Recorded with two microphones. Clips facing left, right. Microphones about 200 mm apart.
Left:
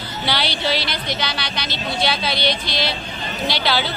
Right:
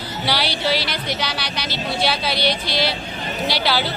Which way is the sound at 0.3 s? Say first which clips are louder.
Right 1 dB; 10° right (ahead or behind).